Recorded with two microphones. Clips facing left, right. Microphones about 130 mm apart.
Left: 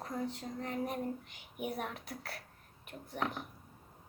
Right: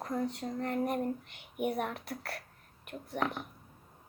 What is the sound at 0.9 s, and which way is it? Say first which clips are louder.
Speech: right 5 dB; 65° right (ahead or behind).